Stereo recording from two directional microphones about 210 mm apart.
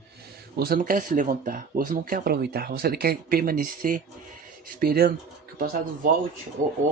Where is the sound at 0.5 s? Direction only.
45° right (ahead or behind).